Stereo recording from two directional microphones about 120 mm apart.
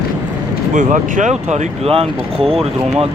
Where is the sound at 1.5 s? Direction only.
65° right (ahead or behind).